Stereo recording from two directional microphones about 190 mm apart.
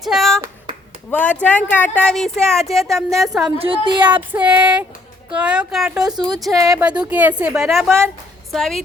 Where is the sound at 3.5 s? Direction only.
30° right (ahead or behind).